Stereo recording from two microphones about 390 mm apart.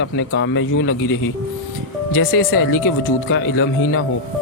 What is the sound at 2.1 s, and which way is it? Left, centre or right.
Speech, left.